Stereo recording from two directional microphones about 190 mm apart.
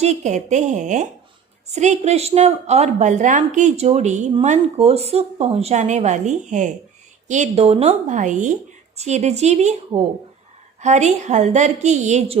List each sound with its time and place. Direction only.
0.0 s a woman's voice: 35° right (ahead or behind)